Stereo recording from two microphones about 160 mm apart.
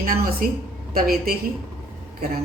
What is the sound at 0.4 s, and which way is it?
A woman's voice, 60° right (ahead or behind).